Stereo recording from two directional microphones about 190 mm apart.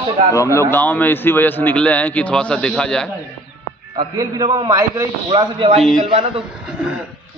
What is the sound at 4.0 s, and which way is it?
A man's voice, 25° right (ahead or behind).